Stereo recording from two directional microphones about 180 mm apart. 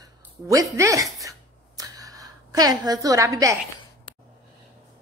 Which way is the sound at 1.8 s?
20° right (ahead or behind).